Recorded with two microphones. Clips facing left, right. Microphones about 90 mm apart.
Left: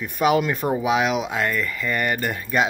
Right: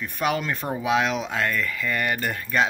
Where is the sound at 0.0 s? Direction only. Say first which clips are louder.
Left 6 dB; 10° left (ahead or behind).